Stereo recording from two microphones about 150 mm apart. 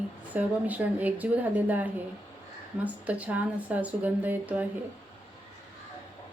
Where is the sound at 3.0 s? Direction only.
10° right (ahead or behind).